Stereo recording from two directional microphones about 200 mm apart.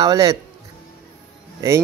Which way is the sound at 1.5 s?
15° right (ahead or behind).